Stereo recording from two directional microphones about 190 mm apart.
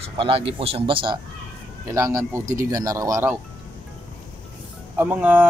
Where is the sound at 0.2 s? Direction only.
30° right (ahead or behind).